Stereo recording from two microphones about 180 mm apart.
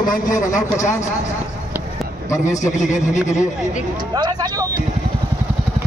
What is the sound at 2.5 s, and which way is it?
Speech, 40° left (ahead or behind).